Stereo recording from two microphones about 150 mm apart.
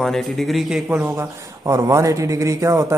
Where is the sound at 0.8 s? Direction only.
15° right (ahead or behind).